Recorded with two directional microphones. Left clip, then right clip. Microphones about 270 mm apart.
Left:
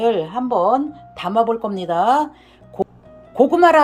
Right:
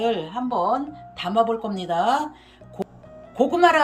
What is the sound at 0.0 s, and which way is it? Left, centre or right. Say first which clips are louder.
Speech: left 6 dB; centre.